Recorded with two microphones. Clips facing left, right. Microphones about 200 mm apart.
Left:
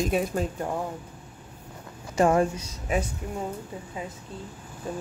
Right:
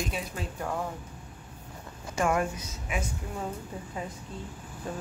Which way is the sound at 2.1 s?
30° left (ahead or behind).